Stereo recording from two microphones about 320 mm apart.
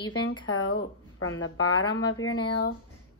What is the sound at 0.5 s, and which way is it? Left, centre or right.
A woman's voice, left.